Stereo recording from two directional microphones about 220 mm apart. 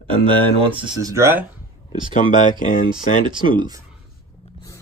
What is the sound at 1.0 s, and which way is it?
Speech, 15° right (ahead or behind).